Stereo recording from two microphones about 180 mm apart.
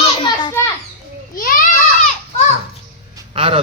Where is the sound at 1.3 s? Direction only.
50° left (ahead or behind).